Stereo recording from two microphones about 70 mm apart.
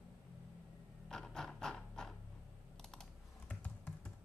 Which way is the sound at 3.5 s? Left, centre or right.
Left.